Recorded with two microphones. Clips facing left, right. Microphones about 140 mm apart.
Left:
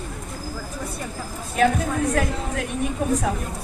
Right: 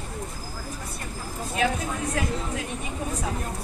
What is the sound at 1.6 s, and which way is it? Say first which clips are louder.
Speech: left 7 dB; 55° left (ahead or behind).